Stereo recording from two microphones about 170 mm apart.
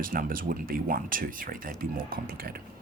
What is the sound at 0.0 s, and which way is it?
Speech, 55° right (ahead or behind).